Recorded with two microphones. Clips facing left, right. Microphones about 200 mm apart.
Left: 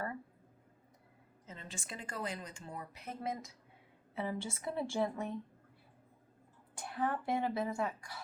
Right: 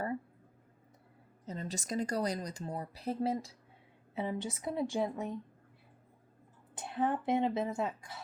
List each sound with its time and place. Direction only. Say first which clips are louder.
1.5 s speech: right 9 dB; 40° right (ahead or behind)
4.1 s speech: right 3 dB; 20° right (ahead or behind)
6.7 s speech: right 4 dB; 25° right (ahead or behind)